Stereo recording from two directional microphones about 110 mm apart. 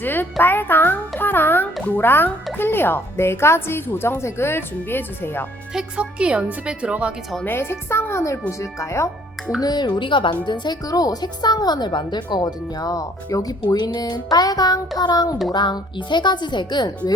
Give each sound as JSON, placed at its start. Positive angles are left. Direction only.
{"t": 0.0, "sound": "a sound", "side_deg": 15}
{"t": 1.8, "sound": "a child's voice", "side_deg": 15}
{"t": 5.7, "sound": "speech", "side_deg": -10}
{"t": 7.4, "sound": "a woman's voice", "side_deg": 20}
{"t": 9.6, "sound": "speech", "side_deg": 40}